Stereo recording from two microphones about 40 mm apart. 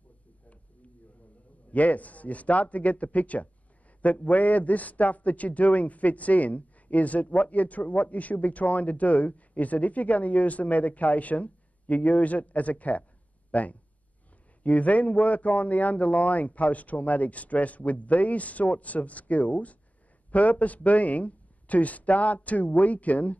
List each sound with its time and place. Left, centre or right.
1.7 s a man's voice: left